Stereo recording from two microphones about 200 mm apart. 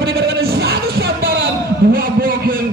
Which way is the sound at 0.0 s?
50° right (ahead or behind).